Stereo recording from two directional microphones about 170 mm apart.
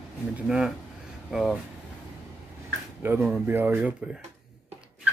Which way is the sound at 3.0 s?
10° right (ahead or behind).